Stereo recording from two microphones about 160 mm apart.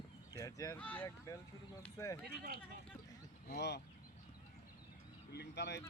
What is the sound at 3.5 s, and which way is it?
Speech, 90° left.